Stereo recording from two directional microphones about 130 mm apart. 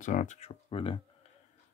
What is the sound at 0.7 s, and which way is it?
Speech, 45° left (ahead or behind).